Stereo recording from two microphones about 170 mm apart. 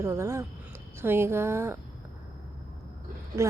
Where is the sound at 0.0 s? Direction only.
15° right (ahead or behind).